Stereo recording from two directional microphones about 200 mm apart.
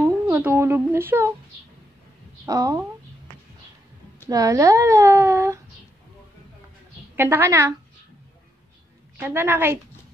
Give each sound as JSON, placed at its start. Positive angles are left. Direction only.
{"t": 0.3, "sound": "speech", "side_deg": -10}
{"t": 2.4, "sound": "speech", "side_deg": -15}
{"t": 4.3, "sound": "speech", "side_deg": -15}
{"t": 7.2, "sound": "speech", "side_deg": -10}
{"t": 9.2, "sound": "speech", "side_deg": -10}